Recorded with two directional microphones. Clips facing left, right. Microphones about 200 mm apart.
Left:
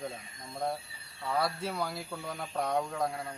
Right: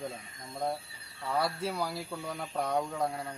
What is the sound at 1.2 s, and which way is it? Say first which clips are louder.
Speech: even; centre (ahead or behind).